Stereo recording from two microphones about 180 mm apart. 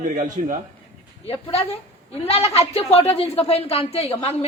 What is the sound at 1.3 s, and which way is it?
A woman's voice, 35° left (ahead or behind).